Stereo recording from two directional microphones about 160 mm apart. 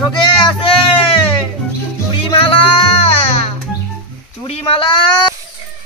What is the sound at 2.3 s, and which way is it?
Music, 35° left (ahead or behind).